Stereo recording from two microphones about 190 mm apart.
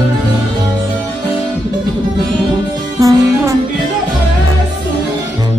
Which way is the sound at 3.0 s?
15° right (ahead or behind).